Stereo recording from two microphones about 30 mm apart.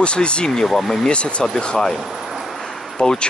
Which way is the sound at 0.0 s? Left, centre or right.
Left.